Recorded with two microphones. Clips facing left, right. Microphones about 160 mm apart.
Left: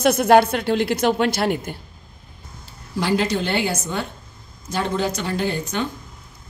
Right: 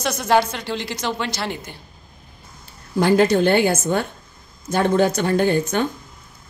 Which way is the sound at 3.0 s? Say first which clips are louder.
Right 6 dB; 50° right (ahead or behind).